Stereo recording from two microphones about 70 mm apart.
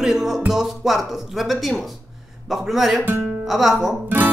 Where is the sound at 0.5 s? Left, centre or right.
Centre.